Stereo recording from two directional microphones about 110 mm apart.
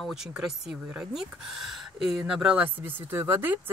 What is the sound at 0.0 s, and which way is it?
Speech, 5° right (ahead or behind).